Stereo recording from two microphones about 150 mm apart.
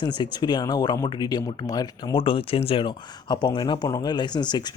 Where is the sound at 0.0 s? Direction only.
30° left (ahead or behind).